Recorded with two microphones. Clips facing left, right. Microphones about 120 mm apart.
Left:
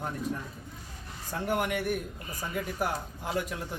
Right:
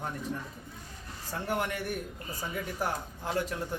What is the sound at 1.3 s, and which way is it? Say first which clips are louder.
Speech: left 3 dB; 15° left (ahead or behind).